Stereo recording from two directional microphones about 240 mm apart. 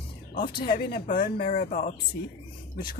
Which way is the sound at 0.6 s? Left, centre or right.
Left.